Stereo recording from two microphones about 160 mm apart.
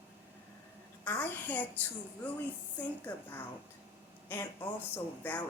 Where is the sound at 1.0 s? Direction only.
10° left (ahead or behind).